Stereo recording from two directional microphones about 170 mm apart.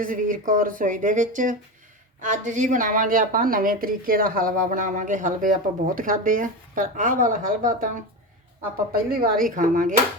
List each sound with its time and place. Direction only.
0.0 s speech: 50° right (ahead or behind)
8.9 s speech: 60° right (ahead or behind)